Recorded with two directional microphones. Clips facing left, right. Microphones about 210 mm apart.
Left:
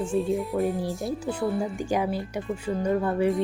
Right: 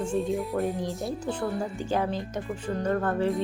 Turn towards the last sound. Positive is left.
turn(degrees=10)  # may be behind; listen again after turning